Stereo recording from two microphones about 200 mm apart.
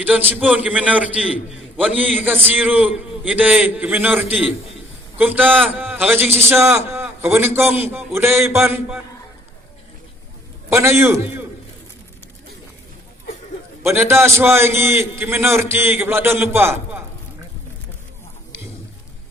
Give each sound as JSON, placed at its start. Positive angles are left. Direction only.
{"t": 0.0, "sound": "a man's voice", "side_deg": -10}
{"t": 5.5, "sound": "a man's voice", "side_deg": 5}
{"t": 6.0, "sound": "a man's voice", "side_deg": -10}
{"t": 10.7, "sound": "a man's voice", "side_deg": -15}
{"t": 13.8, "sound": "a man's voice", "side_deg": -15}